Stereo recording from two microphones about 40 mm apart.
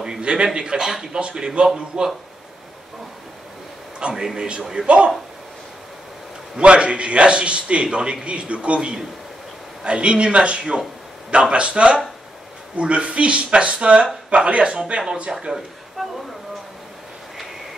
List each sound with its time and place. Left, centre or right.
0.0 s a man's voice: right
4.0 s a man's voice: right
6.5 s a man's voice: right
16.0 s speech: centre